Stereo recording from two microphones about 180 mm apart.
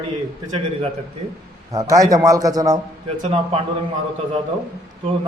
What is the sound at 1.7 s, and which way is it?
A man's voice, 20° right (ahead or behind).